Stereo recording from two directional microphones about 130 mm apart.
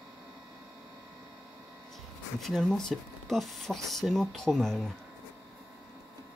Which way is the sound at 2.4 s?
Centre (ahead or behind).